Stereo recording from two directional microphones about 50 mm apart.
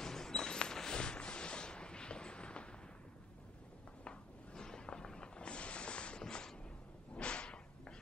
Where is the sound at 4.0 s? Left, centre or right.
Centre.